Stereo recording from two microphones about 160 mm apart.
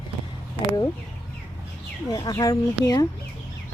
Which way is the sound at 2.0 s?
25° left (ahead or behind).